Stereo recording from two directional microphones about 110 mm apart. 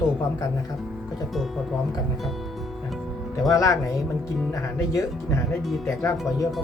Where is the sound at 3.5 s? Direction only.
30° left (ahead or behind).